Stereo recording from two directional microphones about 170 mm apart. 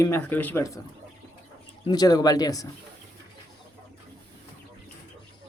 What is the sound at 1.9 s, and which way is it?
Speech, 25° left (ahead or behind).